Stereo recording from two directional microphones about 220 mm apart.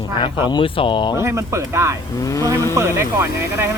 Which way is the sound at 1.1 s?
10° right (ahead or behind).